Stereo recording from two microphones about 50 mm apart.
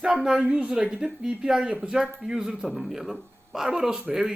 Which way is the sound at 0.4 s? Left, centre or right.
Right.